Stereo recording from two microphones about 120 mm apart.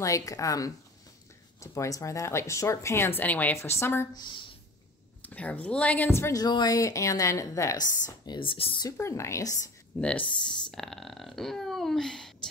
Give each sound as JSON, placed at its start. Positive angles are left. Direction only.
{"t": 0.0, "sound": "speech", "side_deg": 30}
{"t": 4.1, "sound": "a woman's voice", "side_deg": 40}
{"t": 5.2, "sound": "speech", "side_deg": 10}
{"t": 6.4, "sound": "speech", "side_deg": 35}
{"t": 8.3, "sound": "speech", "side_deg": 45}
{"t": 8.9, "sound": "speech", "side_deg": 25}
{"t": 9.9, "sound": "speech", "side_deg": 10}